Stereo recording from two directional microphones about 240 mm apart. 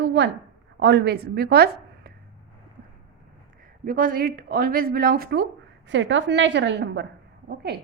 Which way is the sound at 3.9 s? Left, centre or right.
Right.